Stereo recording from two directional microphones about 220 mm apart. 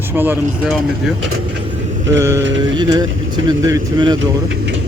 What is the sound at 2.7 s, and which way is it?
Speech, 20° right (ahead or behind).